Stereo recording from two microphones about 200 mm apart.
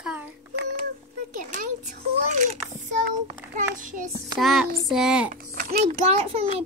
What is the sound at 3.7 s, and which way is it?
Speech, 40° right (ahead or behind).